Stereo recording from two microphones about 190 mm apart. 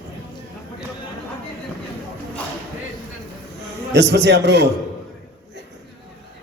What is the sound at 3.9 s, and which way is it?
Speech, 65° right (ahead or behind).